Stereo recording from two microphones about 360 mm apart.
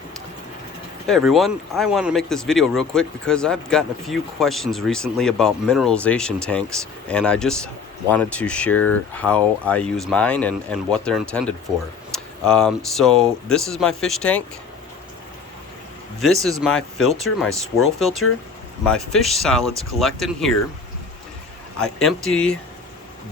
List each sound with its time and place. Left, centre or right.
1.0 s speech: centre
16.2 s speech: centre
21.8 s speech: centre